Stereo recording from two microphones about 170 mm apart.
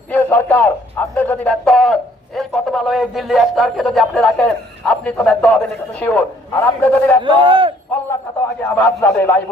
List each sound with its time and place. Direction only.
0.1 s a man's voice: 10° left (ahead or behind)
7.2 s speech: 30° right (ahead or behind)
8.7 s a man's voice: 10° left (ahead or behind)